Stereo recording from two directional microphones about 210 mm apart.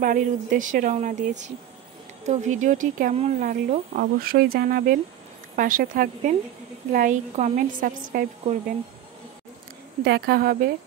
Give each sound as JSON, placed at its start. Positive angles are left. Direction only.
{"t": 0.0, "sound": "speech", "side_deg": -40}
{"t": 10.0, "sound": "a woman's voice", "side_deg": -50}